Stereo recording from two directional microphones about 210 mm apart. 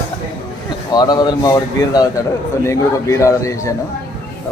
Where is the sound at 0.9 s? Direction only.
20° left (ahead or behind).